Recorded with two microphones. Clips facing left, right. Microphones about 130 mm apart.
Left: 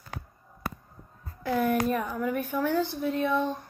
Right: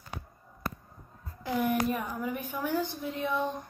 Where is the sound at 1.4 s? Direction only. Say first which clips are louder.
Left 3 dB; 15° right (ahead or behind).